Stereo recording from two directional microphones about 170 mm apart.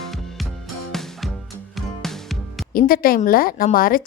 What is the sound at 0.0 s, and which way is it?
Music, centre (ahead or behind).